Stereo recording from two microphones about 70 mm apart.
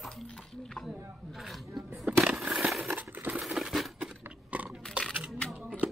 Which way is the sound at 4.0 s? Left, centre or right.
Centre.